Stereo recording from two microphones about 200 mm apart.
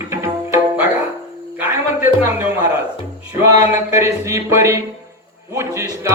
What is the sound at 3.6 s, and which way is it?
Music, 15° right (ahead or behind).